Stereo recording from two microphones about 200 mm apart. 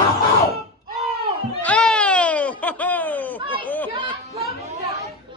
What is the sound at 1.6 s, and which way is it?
Baby cry, 5° left (ahead or behind).